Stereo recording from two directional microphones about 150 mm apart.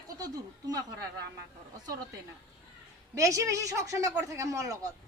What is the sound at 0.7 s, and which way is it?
Speech, 25° right (ahead or behind).